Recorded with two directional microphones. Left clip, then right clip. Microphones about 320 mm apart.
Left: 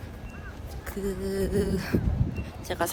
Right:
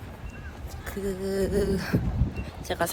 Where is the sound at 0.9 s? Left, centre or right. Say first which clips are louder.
Right 1 dB; centre.